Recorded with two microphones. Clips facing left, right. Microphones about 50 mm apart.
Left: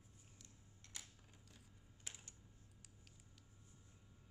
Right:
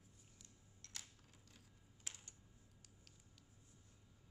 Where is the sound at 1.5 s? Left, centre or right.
Centre.